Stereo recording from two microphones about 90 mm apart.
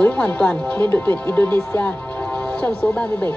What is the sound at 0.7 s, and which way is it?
Music, 25° left (ahead or behind).